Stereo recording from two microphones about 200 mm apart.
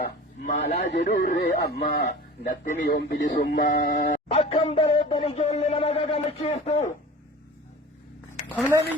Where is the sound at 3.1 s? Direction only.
60° left (ahead or behind).